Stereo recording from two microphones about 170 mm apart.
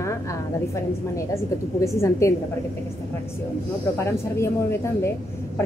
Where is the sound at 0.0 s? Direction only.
15° left (ahead or behind).